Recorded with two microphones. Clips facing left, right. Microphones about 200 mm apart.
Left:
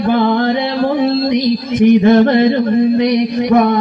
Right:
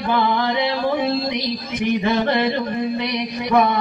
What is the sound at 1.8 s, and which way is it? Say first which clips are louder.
A man's voice: left 11 dB; 50° left (ahead or behind).